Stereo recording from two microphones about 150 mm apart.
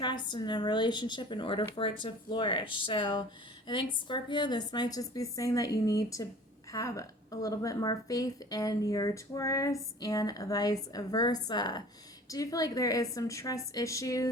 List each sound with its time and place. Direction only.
0.0 s a woman's voice: 30° left (ahead or behind)